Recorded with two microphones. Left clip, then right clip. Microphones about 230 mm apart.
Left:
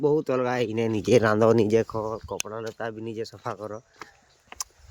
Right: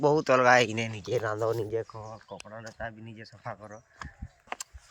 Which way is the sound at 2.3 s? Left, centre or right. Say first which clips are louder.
Left 10 dB; centre.